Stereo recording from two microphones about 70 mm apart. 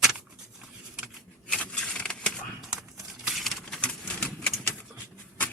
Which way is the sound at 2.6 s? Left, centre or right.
Centre.